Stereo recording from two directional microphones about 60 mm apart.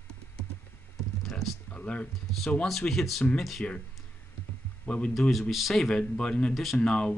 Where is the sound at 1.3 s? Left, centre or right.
Centre.